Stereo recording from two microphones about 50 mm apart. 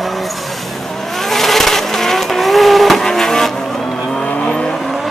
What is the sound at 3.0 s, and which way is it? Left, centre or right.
Vehicle, centre.